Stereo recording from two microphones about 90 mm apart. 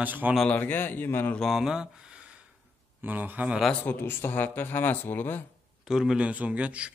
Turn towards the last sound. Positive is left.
turn(degrees=-15)  # may be behind; listen again after turning